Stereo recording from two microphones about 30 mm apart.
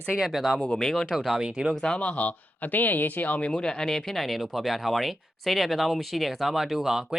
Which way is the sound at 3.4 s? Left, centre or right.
Left.